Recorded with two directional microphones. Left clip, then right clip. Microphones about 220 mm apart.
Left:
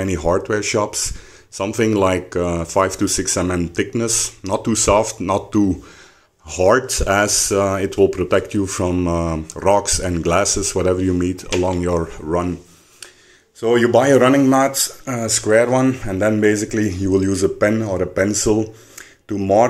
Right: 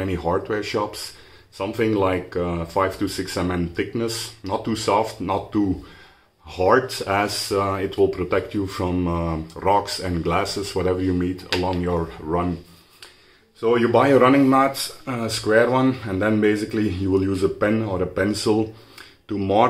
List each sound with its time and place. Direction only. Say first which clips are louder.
0.0 s speech: left 5 dB; 35° left (ahead or behind)
13.6 s speech: left 3 dB; 30° left (ahead or behind); by 19.6 s 10° left (ahead or behind)